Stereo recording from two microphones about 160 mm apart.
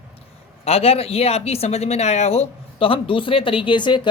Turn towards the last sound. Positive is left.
turn(degrees=30)  # may be behind; listen again after turning